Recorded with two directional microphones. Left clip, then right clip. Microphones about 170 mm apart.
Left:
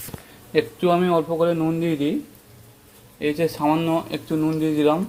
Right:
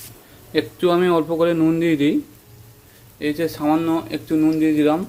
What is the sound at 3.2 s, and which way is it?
Speech, 5° right (ahead or behind).